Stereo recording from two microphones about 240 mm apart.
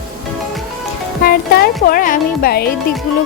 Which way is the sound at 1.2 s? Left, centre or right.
Left.